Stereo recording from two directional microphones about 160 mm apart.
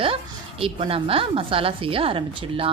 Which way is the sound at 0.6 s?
35° right (ahead or behind).